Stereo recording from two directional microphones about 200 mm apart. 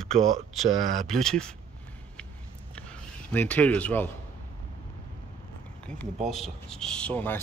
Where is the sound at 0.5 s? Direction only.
Centre (ahead or behind).